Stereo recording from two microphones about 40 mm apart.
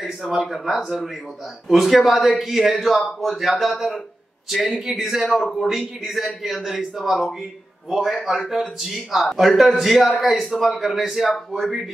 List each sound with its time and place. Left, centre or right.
0.2 s speech: centre
0.5 s a man's voice: centre
7.2 s a man's voice: centre
7.9 s a man's voice: centre